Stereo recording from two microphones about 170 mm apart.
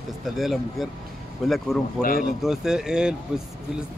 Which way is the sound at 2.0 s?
55° left (ahead or behind).